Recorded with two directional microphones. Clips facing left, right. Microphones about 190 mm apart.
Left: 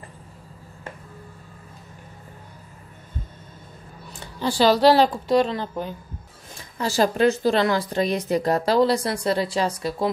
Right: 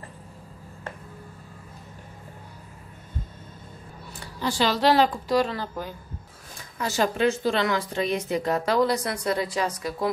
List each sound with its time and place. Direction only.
4.2 s a woman's voice: 30° left (ahead or behind)
6.8 s a woman's voice: 35° left (ahead or behind)